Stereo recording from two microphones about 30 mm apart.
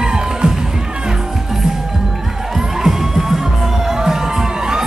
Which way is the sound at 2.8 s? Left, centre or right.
Centre.